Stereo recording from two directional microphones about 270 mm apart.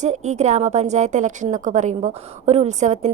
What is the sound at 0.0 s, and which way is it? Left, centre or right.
A woman's voice, right.